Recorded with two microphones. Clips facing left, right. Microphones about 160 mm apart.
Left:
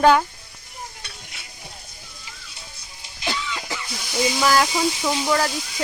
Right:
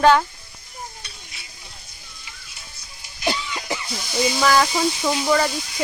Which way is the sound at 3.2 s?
15° right (ahead or behind).